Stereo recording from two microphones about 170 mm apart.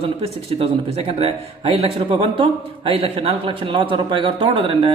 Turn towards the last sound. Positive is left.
turn(degrees=-30)  # may be behind; listen again after turning